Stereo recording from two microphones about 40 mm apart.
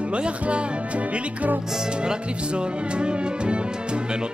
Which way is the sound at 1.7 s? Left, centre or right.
Centre.